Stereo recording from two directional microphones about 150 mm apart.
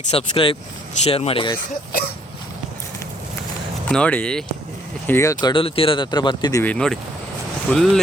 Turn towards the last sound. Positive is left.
turn(degrees=5)  # may be behind; listen again after turning